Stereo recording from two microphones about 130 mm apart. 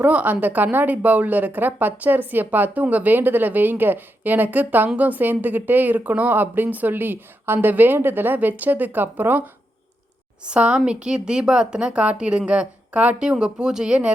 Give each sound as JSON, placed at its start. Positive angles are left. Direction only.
{"t": 0.0, "sound": "a woman's voice", "side_deg": -10}
{"t": 10.4, "sound": "a woman's voice", "side_deg": -10}